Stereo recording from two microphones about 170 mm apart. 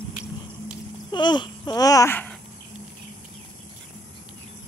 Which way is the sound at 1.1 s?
25° left (ahead or behind).